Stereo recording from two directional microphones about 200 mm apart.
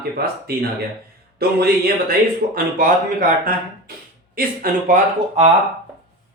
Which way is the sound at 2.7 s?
45° right (ahead or behind).